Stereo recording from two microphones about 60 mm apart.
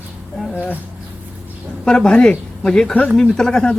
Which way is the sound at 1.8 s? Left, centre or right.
Centre.